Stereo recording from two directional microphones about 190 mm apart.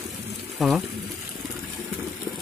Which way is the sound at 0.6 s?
Centre (ahead or behind).